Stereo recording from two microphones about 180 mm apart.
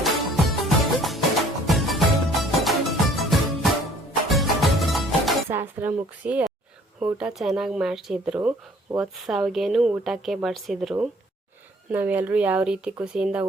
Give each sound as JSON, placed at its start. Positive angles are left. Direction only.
{"t": 0.0, "sound": "music", "side_deg": 0}
{"t": 5.5, "sound": "a sound", "side_deg": -10}
{"t": 7.0, "sound": "speech", "side_deg": -5}
{"t": 8.4, "sound": "speech", "side_deg": -15}
{"t": 9.0, "sound": "speech", "side_deg": 0}